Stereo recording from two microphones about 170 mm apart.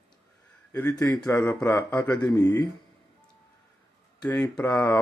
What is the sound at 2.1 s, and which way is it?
Speech, 20° left (ahead or behind).